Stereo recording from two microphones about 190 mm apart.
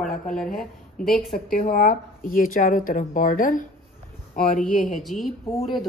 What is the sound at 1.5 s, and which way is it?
Speech, 50° left (ahead or behind).